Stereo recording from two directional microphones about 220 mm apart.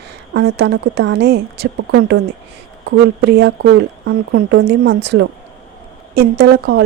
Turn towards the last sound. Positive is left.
turn(degrees=-50)  # may be behind; listen again after turning